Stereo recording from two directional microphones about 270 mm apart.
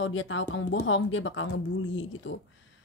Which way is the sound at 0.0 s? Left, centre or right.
Left.